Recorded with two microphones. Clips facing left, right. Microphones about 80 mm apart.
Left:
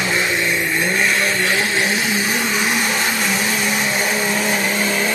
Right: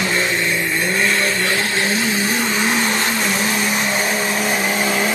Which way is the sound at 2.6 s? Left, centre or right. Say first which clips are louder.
Right 1 dB; centre.